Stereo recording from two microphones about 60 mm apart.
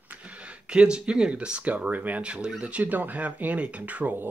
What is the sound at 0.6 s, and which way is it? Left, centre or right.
Speech, centre.